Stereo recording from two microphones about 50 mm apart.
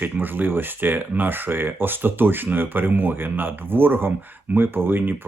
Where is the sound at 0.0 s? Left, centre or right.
Right.